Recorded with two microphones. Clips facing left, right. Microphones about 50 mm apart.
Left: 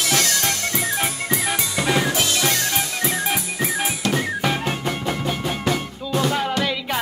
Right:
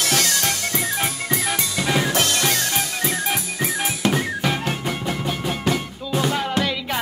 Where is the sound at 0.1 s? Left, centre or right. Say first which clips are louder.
Left 2 dB; left.